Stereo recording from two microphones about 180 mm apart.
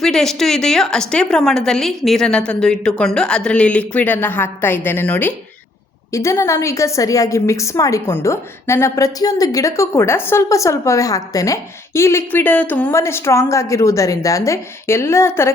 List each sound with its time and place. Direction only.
0.0 s a woman's voice: centre (ahead or behind)